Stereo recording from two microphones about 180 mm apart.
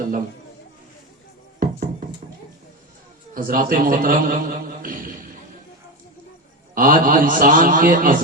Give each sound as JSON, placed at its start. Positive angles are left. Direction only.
{"t": 1.5, "sound": "music", "side_deg": -50}
{"t": 3.3, "sound": "a man's voice", "side_deg": -50}
{"t": 6.7, "sound": "a man's voice", "side_deg": -50}